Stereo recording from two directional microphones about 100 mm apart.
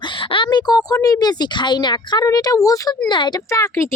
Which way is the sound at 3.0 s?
50° left (ahead or behind).